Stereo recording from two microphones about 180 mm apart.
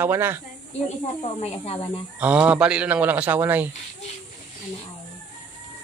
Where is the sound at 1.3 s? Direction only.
35° left (ahead or behind).